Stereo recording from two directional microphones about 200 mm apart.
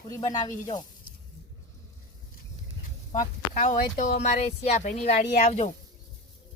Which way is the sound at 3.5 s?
35° left (ahead or behind).